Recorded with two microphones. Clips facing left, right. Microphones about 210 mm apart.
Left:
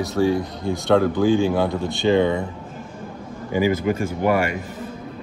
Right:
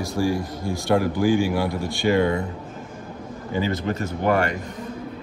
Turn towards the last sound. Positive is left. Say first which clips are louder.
# left 1 dB
turn(degrees=10)  # may be behind; listen again after turning